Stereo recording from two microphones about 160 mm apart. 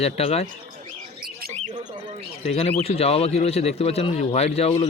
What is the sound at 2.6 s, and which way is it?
Speech, 40° left (ahead or behind).